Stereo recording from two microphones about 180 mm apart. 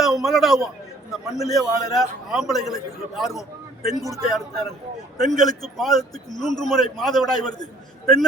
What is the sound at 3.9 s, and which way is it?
Speech, 15° right (ahead or behind).